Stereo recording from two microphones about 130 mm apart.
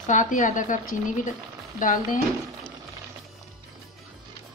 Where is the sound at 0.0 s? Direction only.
75° left (ahead or behind).